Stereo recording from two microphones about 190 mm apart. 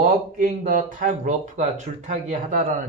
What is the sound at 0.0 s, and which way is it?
Speech, 45° right (ahead or behind).